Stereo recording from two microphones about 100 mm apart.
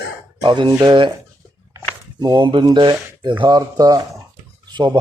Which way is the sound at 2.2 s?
50° right (ahead or behind).